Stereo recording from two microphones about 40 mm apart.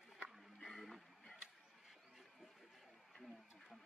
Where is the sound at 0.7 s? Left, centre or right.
Centre.